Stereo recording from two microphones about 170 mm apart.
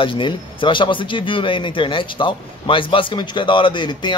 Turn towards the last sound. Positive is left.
turn(degrees=25)  # may be behind; listen again after turning